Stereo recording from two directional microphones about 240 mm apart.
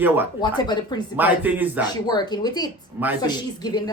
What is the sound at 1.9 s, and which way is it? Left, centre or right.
Speech, centre.